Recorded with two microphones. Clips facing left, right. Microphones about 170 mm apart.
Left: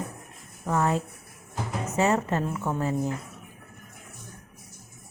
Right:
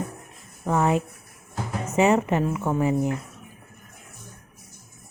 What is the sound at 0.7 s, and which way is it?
Speech, 15° right (ahead or behind).